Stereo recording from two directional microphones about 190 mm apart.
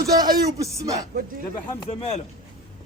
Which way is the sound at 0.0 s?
20° right (ahead or behind).